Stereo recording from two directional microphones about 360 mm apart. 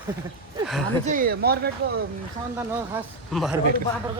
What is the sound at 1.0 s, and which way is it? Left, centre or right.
Speech, right.